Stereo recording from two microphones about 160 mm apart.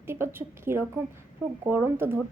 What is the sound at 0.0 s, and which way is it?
A woman's voice, 15° right (ahead or behind).